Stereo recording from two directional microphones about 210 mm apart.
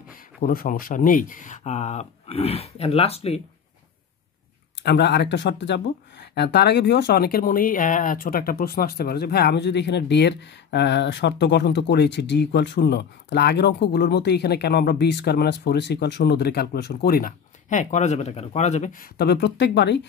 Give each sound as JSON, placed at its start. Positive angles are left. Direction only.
{"t": 0.4, "sound": "speech", "side_deg": 45}
{"t": 4.8, "sound": "speech", "side_deg": 55}